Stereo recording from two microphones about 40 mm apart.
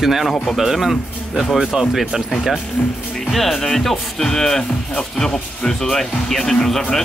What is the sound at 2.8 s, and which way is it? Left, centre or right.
Speech, left.